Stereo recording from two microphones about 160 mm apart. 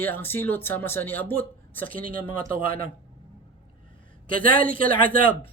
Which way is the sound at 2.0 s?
60° right (ahead or behind).